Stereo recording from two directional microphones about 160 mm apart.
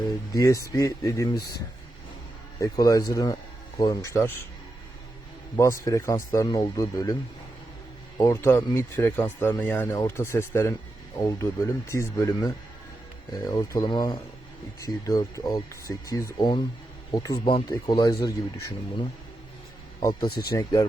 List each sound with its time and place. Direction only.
0.3 s speech: 20° left (ahead or behind)
5.5 s speech: 20° left (ahead or behind)
8.2 s speech: 20° left (ahead or behind)
20.0 s speech: 25° left (ahead or behind)